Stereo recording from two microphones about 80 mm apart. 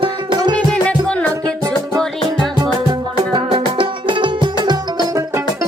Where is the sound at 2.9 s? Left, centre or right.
Right.